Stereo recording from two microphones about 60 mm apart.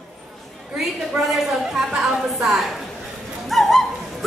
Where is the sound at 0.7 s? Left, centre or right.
Centre.